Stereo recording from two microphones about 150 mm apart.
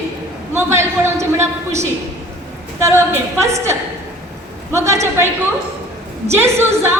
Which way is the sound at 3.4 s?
20° right (ahead or behind).